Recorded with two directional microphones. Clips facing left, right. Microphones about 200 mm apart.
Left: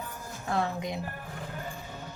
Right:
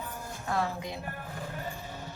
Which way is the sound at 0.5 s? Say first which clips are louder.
Left 2 dB; 20° left (ahead or behind).